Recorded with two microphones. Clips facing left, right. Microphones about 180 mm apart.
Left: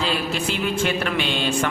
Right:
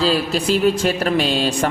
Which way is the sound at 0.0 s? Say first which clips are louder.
Right 6 dB; 35° right (ahead or behind).